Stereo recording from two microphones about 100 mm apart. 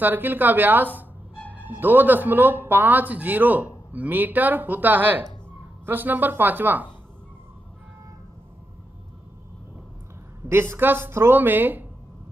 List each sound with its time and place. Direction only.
0.0 s a woman's voice: 20° right (ahead or behind)
10.5 s a woman's voice: 25° right (ahead or behind)